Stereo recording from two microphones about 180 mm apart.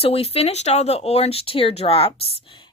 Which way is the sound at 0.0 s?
30° left (ahead or behind).